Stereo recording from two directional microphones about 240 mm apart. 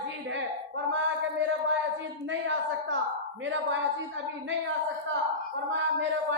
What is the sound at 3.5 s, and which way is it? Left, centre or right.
Speech, right.